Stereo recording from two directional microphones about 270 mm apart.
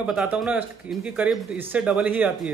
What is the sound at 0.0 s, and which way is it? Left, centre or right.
Speech, centre.